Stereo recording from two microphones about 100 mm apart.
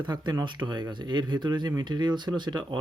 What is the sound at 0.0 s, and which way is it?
Speech, 45° right (ahead or behind).